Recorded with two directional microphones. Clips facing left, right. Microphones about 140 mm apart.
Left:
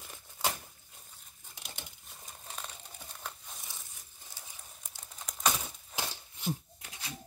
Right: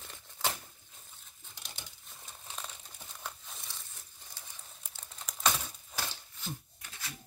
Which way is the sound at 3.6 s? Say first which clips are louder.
Even; 10° left (ahead or behind).